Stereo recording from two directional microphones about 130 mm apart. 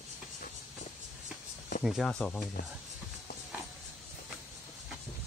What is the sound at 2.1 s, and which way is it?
Speech, 5° left (ahead or behind).